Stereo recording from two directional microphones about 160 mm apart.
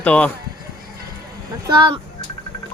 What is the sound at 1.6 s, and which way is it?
Speech, 25° right (ahead or behind).